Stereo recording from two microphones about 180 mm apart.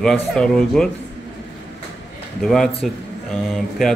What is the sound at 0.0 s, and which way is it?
Speech, 5° left (ahead or behind).